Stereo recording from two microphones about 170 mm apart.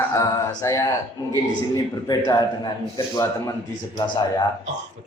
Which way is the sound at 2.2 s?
25° left (ahead or behind).